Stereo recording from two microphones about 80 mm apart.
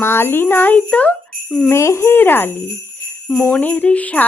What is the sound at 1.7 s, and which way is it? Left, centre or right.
Speech, left.